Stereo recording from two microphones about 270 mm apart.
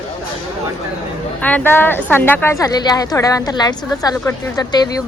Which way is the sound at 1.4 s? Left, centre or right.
Centre.